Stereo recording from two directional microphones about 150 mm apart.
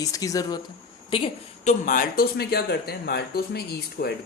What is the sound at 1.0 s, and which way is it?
Speech, 40° left (ahead or behind).